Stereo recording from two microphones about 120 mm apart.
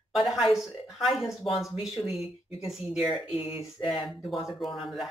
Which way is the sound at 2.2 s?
50° left (ahead or behind).